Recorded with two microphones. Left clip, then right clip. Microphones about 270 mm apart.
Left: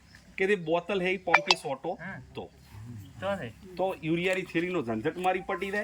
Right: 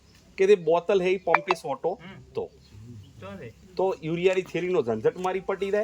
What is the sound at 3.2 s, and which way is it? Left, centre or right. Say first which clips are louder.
Speech: left 9 dB; left.